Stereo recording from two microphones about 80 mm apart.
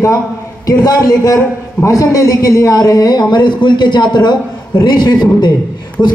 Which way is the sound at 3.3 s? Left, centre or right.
Left.